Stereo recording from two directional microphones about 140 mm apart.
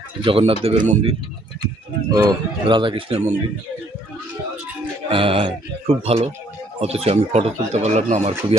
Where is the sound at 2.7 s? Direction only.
35° right (ahead or behind).